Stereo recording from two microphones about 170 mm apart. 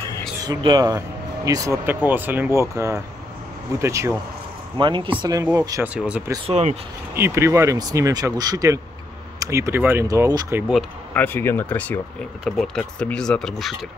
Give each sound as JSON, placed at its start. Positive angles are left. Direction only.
{"t": 0.4, "sound": "speech", "side_deg": -25}
{"t": 4.7, "sound": "speech", "side_deg": -30}
{"t": 5.9, "sound": "speech", "side_deg": -5}
{"t": 6.4, "sound": "speech", "side_deg": -40}
{"t": 7.2, "sound": "speech", "side_deg": -15}
{"t": 11.1, "sound": "speech", "side_deg": 10}